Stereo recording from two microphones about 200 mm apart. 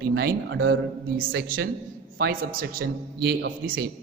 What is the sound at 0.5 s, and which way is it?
Speech, 75° right (ahead or behind).